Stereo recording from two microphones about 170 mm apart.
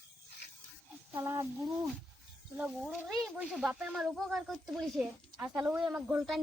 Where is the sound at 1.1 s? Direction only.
15° right (ahead or behind).